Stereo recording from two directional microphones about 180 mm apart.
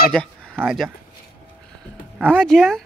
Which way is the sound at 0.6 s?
Centre (ahead or behind).